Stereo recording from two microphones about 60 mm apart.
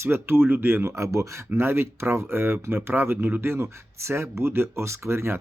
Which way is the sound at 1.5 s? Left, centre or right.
Right.